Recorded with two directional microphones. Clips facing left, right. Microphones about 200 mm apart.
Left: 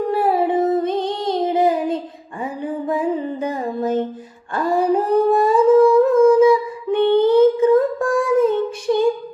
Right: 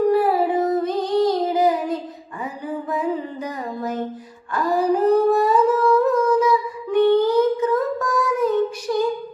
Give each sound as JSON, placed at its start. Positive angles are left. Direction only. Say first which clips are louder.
{"t": 0.1, "sound": "child singing", "louder": "even", "side_deg": 25}
{"t": 2.4, "sound": "music", "louder": "left 4 dB", "side_deg": 25}
{"t": 4.5, "sound": "humming", "louder": "left 2 dB", "side_deg": 25}